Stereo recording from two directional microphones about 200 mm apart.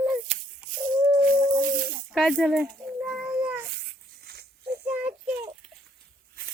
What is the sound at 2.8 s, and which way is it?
Child singing, 10° right (ahead or behind).